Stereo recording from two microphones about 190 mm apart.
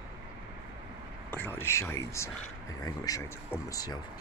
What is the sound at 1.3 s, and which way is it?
Speech, 10° left (ahead or behind).